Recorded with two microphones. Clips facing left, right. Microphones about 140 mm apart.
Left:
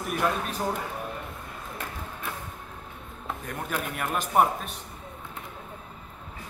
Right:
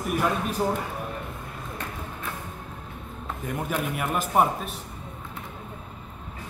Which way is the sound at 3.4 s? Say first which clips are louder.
Right 5 dB; 5° right (ahead or behind).